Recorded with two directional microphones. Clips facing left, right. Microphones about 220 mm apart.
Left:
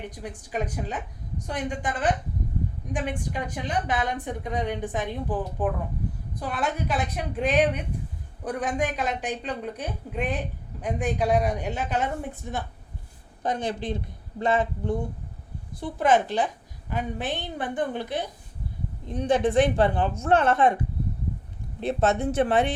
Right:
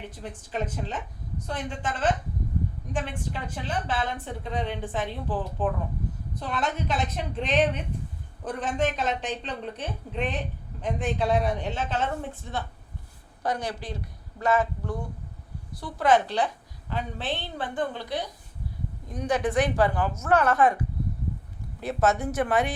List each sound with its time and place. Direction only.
0.1 s a woman's voice: 15° left (ahead or behind)
21.8 s speech: 25° left (ahead or behind)